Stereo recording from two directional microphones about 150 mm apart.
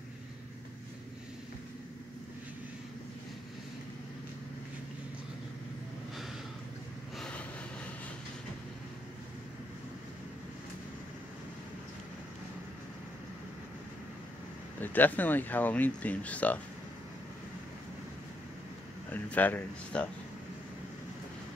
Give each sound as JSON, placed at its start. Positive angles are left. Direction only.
{"t": 7.2, "sound": "vehicle", "side_deg": 5}
{"t": 14.8, "sound": "speech", "side_deg": 10}
{"t": 19.0, "sound": "speech", "side_deg": 10}